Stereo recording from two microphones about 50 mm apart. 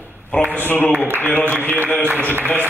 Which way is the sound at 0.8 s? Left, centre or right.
Right.